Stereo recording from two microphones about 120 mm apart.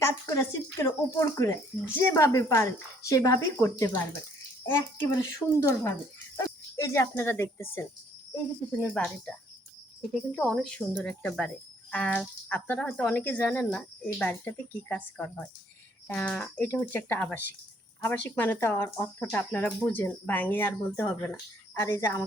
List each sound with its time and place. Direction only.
0.0 s speech: 25° left (ahead or behind)